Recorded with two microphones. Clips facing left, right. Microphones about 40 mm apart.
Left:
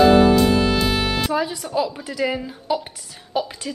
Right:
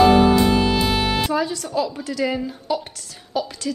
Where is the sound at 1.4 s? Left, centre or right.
Centre.